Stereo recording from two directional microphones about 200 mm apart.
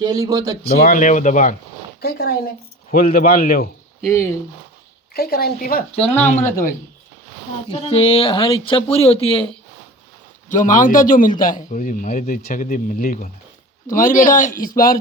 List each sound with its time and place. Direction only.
0.0 s speech: 15° right (ahead or behind)
0.8 s a man's voice: 45° left (ahead or behind)
2.0 s a man's voice: 50° left (ahead or behind)
5.1 s a man's voice: 50° left (ahead or behind)
7.7 s speech: 30° left (ahead or behind)
10.5 s a man's voice: 40° left (ahead or behind)